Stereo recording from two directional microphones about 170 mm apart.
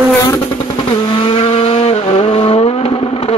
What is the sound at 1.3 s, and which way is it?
Vehicle, 30° left (ahead or behind).